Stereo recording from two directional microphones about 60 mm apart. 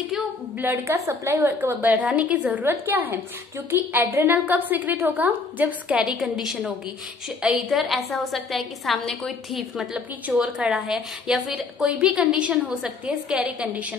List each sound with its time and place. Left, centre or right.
0.8 s a woman's voice: right
1.6 s a woman's voice: right
2.6 s a woman's voice: right; by 6.1 s centre
6.1 s a woman's voice: centre
7.7 s a woman's voice: centre
10.3 s a woman's voice: centre